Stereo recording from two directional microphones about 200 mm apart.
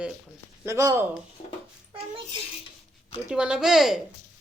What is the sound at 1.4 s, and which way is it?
Dog, 25° left (ahead or behind).